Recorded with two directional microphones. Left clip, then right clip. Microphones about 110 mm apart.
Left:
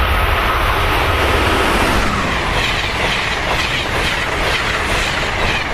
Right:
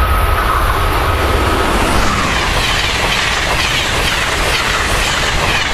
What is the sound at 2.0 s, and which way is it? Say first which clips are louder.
Train: right 3 dB; 35° right (ahead or behind).